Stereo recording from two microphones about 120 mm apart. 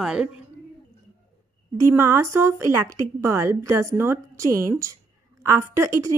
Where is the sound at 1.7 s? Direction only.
20° right (ahead or behind).